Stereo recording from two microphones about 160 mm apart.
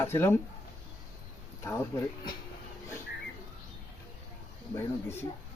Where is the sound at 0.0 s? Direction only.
15° left (ahead or behind).